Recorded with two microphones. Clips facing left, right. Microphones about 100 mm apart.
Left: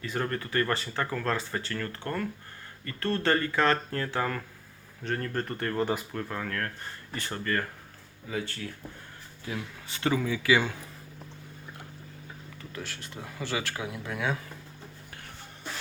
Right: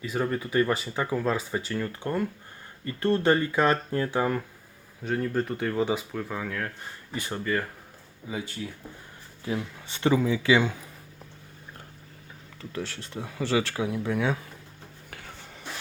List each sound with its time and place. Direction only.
0.0 s speech: 5° right (ahead or behind)
12.7 s speech: 30° right (ahead or behind)